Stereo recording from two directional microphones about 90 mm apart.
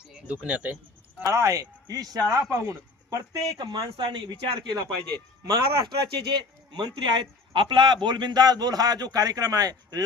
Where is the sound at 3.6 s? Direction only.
55° right (ahead or behind).